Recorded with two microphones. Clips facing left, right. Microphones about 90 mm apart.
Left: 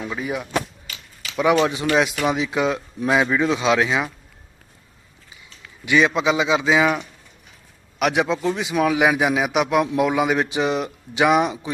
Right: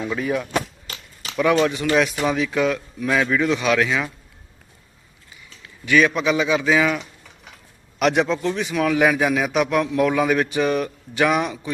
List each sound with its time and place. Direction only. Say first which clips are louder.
0.0 s a man's voice: right 3 dB; 10° left (ahead or behind)
0.9 s a sound: right 2 dB; 40° right (ahead or behind)
1.6 s speech: even; 20° left (ahead or behind)
5.8 s a man's voice: even; 20° left (ahead or behind)
7.9 s a man's voice: right 1 dB; 5° left (ahead or behind)